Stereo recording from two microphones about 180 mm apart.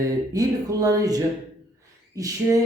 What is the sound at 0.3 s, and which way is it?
Speech, 20° right (ahead or behind).